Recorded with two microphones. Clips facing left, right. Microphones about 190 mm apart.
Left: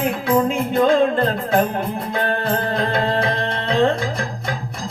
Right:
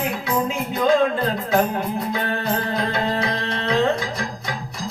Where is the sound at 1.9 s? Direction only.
55° left (ahead or behind).